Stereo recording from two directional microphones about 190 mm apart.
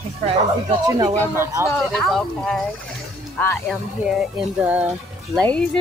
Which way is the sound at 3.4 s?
10° left (ahead or behind).